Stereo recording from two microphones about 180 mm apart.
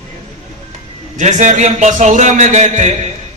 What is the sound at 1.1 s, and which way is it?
A man's voice, 40° right (ahead or behind).